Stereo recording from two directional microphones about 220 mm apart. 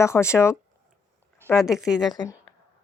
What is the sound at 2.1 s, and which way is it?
Speech, 20° left (ahead or behind).